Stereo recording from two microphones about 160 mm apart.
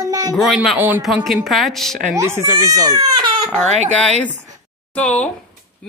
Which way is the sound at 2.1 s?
15° right (ahead or behind).